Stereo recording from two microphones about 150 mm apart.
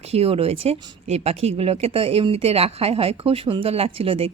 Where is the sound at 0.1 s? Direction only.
40° right (ahead or behind).